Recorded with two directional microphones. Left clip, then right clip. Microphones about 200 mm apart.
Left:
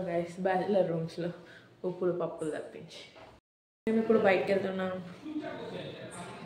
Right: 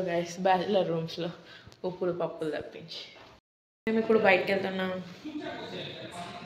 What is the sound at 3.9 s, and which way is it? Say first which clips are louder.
Speech: right 2 dB; centre (ahead or behind).